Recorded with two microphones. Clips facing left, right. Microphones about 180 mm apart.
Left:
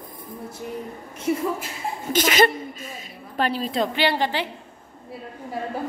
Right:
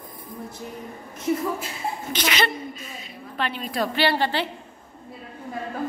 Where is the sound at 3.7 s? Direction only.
20° left (ahead or behind).